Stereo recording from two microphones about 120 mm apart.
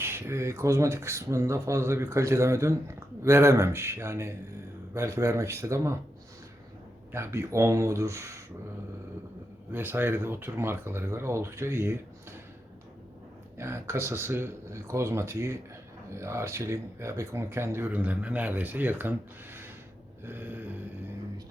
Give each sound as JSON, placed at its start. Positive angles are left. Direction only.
{"t": 0.0, "sound": "speech", "side_deg": -20}
{"t": 7.1, "sound": "speech", "side_deg": -25}
{"t": 9.7, "sound": "speech", "side_deg": -15}
{"t": 13.6, "sound": "speech", "side_deg": -20}
{"t": 20.2, "sound": "a sound", "side_deg": -15}